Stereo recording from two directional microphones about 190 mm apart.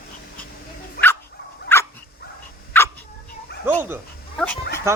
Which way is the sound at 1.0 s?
50° left (ahead or behind).